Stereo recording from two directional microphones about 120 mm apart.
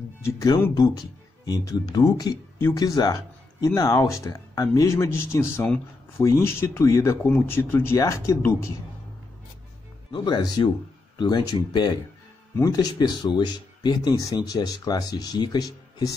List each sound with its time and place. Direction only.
0.2 s speech: 25° left (ahead or behind)
10.1 s speech: 35° left (ahead or behind)